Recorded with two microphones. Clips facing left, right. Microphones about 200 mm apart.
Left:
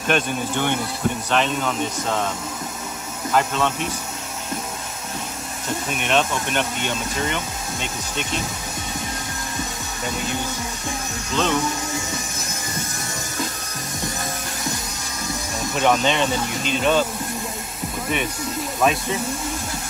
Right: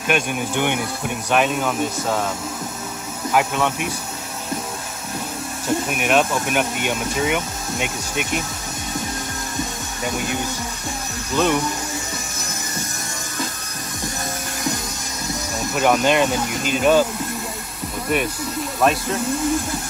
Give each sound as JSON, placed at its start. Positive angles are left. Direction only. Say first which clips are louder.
{"t": 0.1, "sound": "speech", "louder": "even", "side_deg": -15}
{"t": 5.9, "sound": "speech", "louder": "right 1 dB", "side_deg": -5}
{"t": 11.3, "sound": "speech", "louder": "right 3 dB", "side_deg": -10}
{"t": 15.7, "sound": "speech", "louder": "right 2 dB", "side_deg": -5}
{"t": 18.8, "sound": "speech", "louder": "right 1 dB", "side_deg": 0}